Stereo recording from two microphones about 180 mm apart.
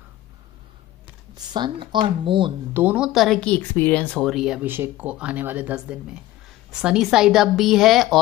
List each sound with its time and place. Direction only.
1.3 s speech: 25° right (ahead or behind)
2.7 s speech: 10° right (ahead or behind)